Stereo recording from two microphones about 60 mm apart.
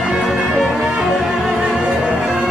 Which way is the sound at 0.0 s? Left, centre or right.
Centre.